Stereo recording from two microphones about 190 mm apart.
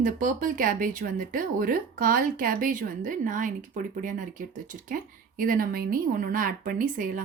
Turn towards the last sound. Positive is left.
turn(degrees=-45)  # may be behind; listen again after turning